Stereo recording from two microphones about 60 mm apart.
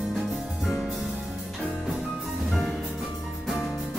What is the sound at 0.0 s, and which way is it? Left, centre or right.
Music, centre.